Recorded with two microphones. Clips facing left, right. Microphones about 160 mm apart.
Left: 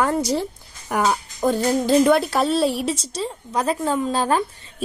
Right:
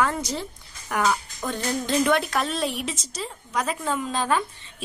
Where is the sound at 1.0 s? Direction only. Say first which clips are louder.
Left 5 dB; 30° left (ahead or behind).